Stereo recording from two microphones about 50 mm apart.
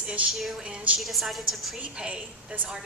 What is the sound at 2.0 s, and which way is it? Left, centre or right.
Speech, right.